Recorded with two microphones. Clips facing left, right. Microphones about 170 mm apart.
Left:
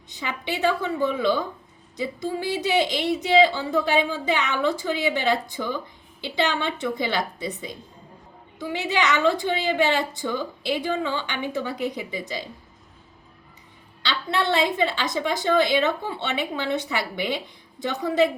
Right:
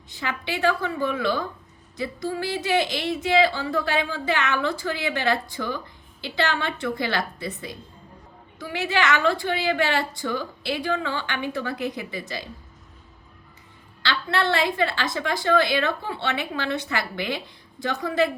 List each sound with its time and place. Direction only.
0.1 s speech: 15° left (ahead or behind)
14.1 s speech: 20° left (ahead or behind)